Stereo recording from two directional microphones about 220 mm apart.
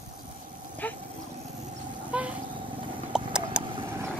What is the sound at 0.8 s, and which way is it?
Dog, 5° left (ahead or behind).